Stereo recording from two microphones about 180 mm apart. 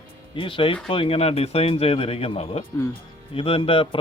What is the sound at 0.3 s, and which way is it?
Speech, 30° left (ahead or behind).